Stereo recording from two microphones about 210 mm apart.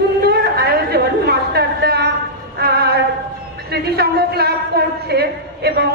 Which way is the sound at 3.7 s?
50° right (ahead or behind).